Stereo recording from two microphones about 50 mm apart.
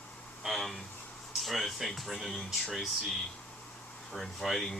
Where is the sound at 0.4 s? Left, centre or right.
Centre.